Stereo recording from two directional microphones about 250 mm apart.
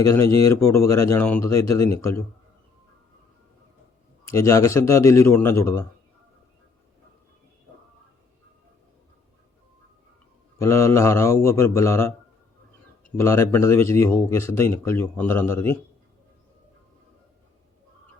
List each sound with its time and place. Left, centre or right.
0.0 s speech: centre
4.3 s speech: centre
10.6 s speech: centre
13.1 s speech: centre